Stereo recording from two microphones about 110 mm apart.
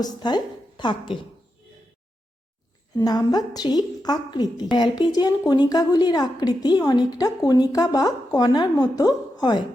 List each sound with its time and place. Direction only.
0.0 s a woman's voice: 40° left (ahead or behind)
2.9 s a woman's voice: 35° left (ahead or behind)